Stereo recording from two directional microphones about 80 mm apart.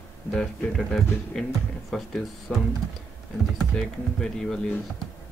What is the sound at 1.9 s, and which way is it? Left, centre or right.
Music, centre.